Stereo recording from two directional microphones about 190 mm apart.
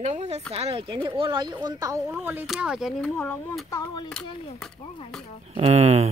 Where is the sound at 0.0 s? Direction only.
35° right (ahead or behind); by 3.1 s centre (ahead or behind).